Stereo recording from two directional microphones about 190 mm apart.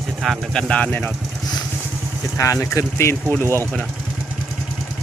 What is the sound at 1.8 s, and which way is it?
Vehicle, 10° right (ahead or behind).